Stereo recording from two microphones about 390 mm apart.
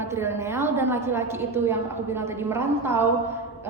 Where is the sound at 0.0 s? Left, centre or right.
Centre.